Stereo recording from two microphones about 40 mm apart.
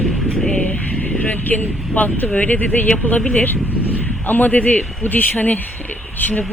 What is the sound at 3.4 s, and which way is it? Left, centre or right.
Speech, left.